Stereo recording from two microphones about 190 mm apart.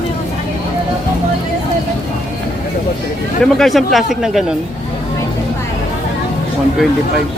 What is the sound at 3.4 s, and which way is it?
Speech, centre (ahead or behind).